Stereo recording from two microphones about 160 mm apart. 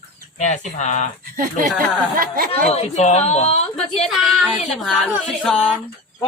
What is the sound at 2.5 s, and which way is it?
A woman's voice, 40° left (ahead or behind).